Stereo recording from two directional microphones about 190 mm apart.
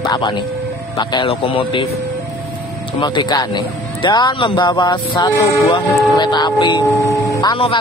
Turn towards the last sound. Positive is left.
turn(degrees=25)  # may be behind; listen again after turning